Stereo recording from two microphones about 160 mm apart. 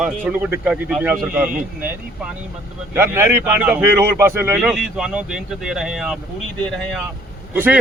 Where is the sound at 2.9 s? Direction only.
15° right (ahead or behind); by 7.0 s 5° left (ahead or behind).